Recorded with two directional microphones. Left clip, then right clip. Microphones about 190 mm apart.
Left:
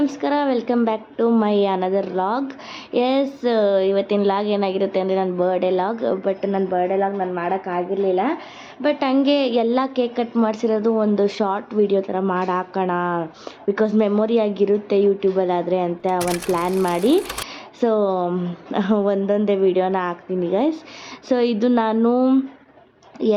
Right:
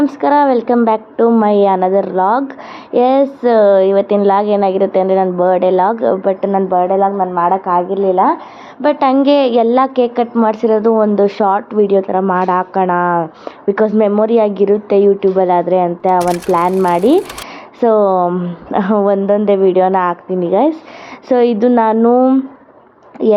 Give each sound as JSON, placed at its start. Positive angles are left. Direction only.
{"t": 0.0, "sound": "a woman's voice", "side_deg": -10}